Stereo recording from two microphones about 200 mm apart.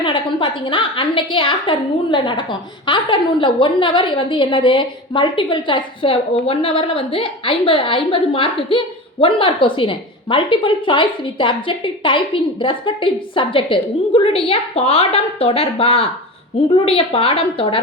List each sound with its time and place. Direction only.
0.0 s a woman's voice: 25° left (ahead or behind)